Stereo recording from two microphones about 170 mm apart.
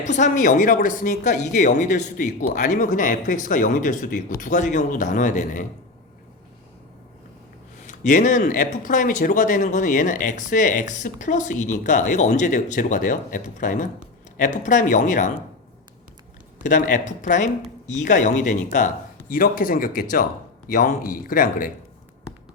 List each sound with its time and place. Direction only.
0.0 s speech: 45° left (ahead or behind)
7.9 s speech: 45° left (ahead or behind)
16.6 s speech: 50° left (ahead or behind)